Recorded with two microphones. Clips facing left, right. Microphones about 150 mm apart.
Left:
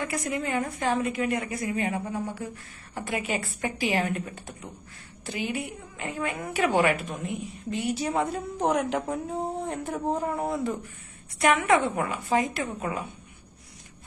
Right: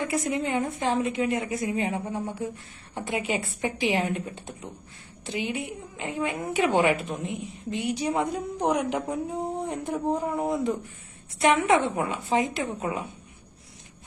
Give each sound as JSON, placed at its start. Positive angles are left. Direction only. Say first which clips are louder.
{"t": 0.0, "sound": "a woman's voice", "louder": "right 3 dB", "side_deg": -25}